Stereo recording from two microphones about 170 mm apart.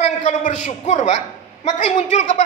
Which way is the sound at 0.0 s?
45° left (ahead or behind).